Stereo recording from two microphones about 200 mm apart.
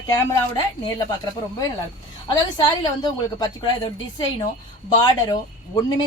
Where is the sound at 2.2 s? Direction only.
20° left (ahead or behind).